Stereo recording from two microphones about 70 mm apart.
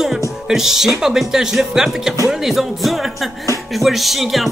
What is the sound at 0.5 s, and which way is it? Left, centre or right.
Music, centre.